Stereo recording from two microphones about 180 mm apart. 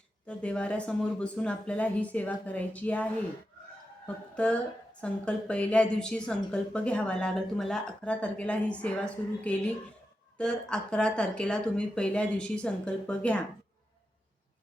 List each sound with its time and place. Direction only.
0.3 s a woman's voice: 5° left (ahead or behind)